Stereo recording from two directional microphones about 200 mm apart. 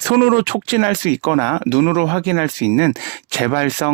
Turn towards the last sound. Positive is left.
turn(degrees=-50)  # may be behind; listen again after turning